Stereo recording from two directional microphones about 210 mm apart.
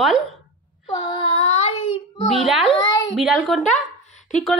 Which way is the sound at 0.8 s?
25° left (ahead or behind).